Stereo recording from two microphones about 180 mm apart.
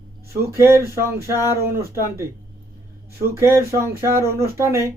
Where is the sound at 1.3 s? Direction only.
15° left (ahead or behind).